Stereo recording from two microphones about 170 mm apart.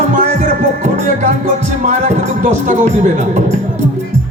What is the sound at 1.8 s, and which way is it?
Speech, 45° right (ahead or behind).